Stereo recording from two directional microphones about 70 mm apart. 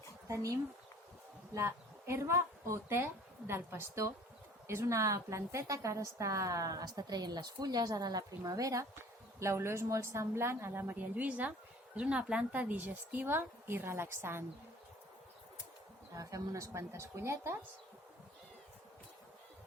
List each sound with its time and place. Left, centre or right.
1.5 s a woman's voice: right
9.4 s a woman's voice: right
16.1 s a woman's voice: right